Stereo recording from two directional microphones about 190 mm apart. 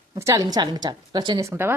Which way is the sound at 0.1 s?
15° right (ahead or behind).